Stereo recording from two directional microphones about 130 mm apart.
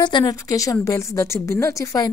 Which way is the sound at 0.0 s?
30° left (ahead or behind).